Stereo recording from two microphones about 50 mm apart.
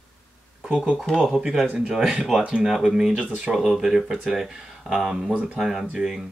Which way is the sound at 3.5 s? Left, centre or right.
Centre.